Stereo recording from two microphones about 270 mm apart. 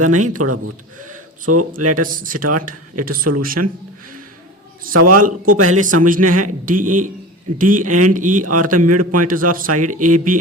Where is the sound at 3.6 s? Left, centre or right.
Right.